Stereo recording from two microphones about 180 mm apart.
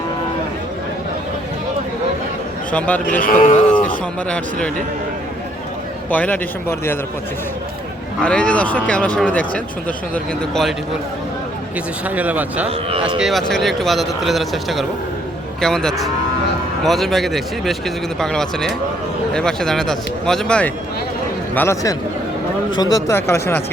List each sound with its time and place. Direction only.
2.7 s a man's voice: 5° left (ahead or behind)
3.2 s speech: 50° left (ahead or behind)
4.3 s speech: 5° left (ahead or behind)
6.1 s a man's voice: 10° left (ahead or behind)
8.2 s a man's voice: 5° left (ahead or behind)
10.5 s speech: centre (ahead or behind)
12.0 s a man's voice: 10° right (ahead or behind); by 23.6 s 15° left (ahead or behind)